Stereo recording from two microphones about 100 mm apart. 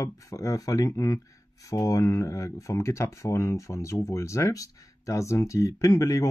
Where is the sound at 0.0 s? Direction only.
30° left (ahead or behind).